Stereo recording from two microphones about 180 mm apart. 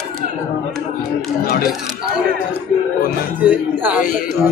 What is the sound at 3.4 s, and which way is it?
Speech, 10° right (ahead or behind).